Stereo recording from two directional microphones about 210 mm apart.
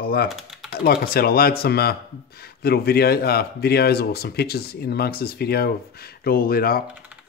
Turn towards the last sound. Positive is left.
turn(degrees=45)  # may be behind; listen again after turning